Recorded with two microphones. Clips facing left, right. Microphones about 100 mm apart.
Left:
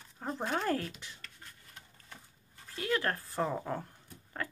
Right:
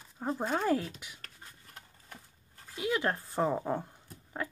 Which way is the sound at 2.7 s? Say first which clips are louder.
Right 2 dB; 10° right (ahead or behind).